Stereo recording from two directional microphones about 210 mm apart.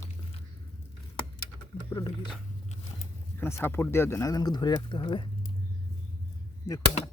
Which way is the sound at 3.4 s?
10° left (ahead or behind).